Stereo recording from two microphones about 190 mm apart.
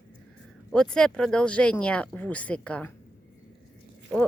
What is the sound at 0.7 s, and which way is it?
Speech, 5° left (ahead or behind).